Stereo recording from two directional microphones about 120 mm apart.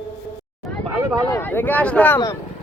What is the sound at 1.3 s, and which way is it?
Speech, 20° left (ahead or behind).